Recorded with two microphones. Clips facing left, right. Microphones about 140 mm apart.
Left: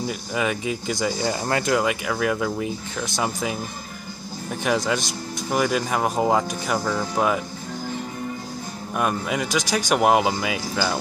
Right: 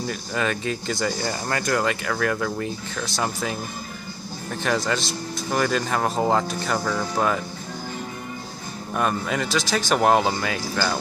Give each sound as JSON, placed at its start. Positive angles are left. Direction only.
{"t": 0.0, "sound": "speech", "side_deg": 10}
{"t": 8.9, "sound": "speech", "side_deg": 10}